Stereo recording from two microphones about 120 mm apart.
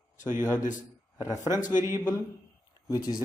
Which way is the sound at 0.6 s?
90° left.